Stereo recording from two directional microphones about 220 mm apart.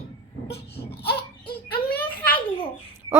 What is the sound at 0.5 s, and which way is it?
Baby cry, 25° left (ahead or behind).